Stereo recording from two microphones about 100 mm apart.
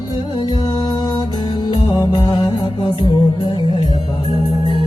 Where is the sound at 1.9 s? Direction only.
45° left (ahead or behind).